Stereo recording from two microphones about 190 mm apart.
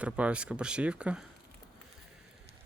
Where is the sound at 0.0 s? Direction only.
5° right (ahead or behind).